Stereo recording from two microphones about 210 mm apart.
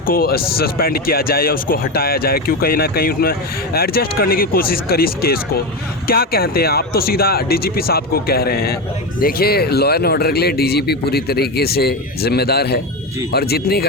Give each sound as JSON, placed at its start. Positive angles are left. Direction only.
{"t": 0.0, "sound": "speech", "side_deg": 45}